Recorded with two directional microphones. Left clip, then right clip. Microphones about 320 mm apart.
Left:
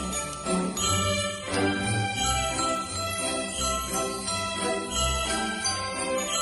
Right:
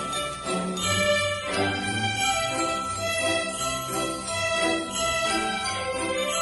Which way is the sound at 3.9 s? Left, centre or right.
Centre.